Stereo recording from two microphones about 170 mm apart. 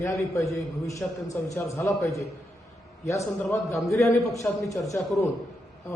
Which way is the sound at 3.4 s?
15° left (ahead or behind).